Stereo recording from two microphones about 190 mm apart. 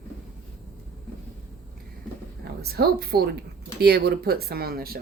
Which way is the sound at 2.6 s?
55° right (ahead or behind).